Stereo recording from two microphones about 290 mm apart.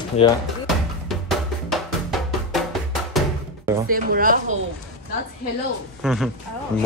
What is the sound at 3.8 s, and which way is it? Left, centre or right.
Speech, right.